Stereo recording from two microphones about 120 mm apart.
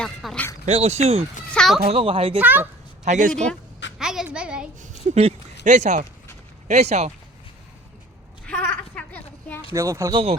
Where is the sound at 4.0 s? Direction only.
5° right (ahead or behind).